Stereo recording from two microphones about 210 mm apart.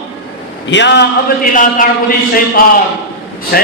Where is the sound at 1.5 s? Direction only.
40° left (ahead or behind).